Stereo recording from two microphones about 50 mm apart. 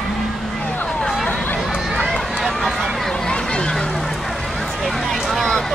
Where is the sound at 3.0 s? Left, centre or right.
Centre.